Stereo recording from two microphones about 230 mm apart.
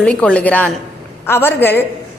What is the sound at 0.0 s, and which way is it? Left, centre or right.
A woman's voice, centre.